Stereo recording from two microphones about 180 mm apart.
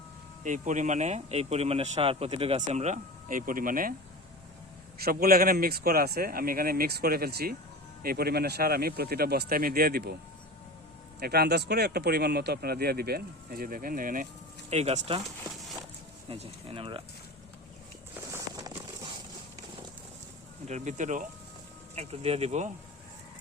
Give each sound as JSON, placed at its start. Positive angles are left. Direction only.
{"t": 0.4, "sound": "speech", "side_deg": -45}
{"t": 4.9, "sound": "speech", "side_deg": -60}
{"t": 11.2, "sound": "speech", "side_deg": -60}
{"t": 14.7, "sound": "speech", "side_deg": -35}
{"t": 16.3, "sound": "speech", "side_deg": -30}
{"t": 18.3, "sound": "a sound", "side_deg": -20}
{"t": 20.7, "sound": "speech", "side_deg": -40}